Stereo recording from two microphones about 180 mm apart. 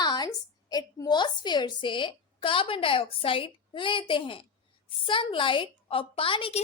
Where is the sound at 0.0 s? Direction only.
20° left (ahead or behind).